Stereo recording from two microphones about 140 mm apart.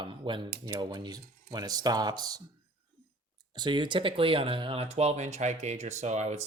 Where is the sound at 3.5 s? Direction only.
35° right (ahead or behind).